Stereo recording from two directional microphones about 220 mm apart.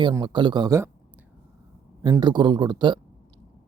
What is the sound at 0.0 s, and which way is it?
Speech, 20° right (ahead or behind).